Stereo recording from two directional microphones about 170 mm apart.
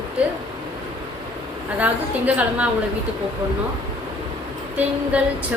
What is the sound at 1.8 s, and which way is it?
Speech, 10° right (ahead or behind).